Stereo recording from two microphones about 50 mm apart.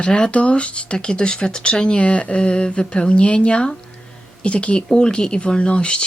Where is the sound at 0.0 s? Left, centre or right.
Left.